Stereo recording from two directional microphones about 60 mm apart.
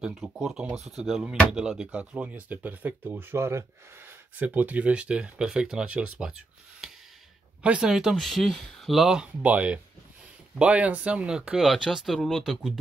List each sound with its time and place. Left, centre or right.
0.0 s speech: centre; by 3.2 s right
3.2 s speech: right
4.4 s speech: right; by 9.1 s centre
9.1 s speech: centre